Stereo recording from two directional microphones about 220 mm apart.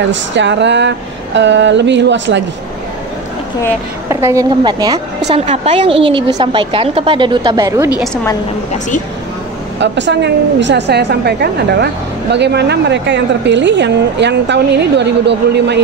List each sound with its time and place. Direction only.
0.1 s a sound: 55° right (ahead or behind)
4.1 s a woman's voice: 15° right (ahead or behind)
8.0 s a woman's voice: 5° left (ahead or behind)
9.8 s a woman's voice: 55° right (ahead or behind)